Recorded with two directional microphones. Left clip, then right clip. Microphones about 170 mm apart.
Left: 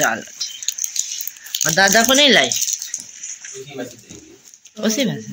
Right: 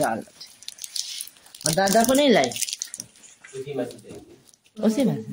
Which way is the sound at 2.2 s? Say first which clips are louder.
Left 6 dB; 10° right (ahead or behind).